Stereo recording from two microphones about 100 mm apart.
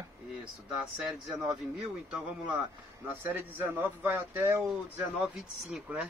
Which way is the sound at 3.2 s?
20° right (ahead or behind).